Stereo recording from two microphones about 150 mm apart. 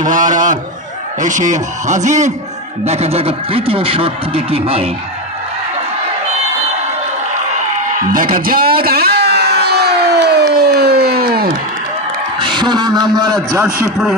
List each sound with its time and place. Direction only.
0.0 s a man's voice: 60° right (ahead or behind); by 4.9 s 40° right (ahead or behind)
8.1 s a sound: 65° right (ahead or behind); by 11.4 s 90° right
12.4 s a man's voice: 30° right (ahead or behind)